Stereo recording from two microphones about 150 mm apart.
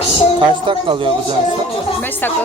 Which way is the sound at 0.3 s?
35° right (ahead or behind).